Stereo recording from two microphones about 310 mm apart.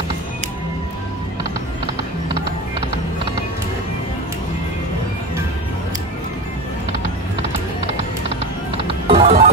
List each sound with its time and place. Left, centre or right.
8.7 s music: centre